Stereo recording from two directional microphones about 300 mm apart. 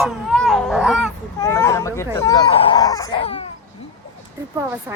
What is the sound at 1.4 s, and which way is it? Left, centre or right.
Speech, centre.